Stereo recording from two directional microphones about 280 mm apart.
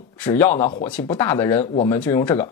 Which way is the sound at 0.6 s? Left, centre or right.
Left.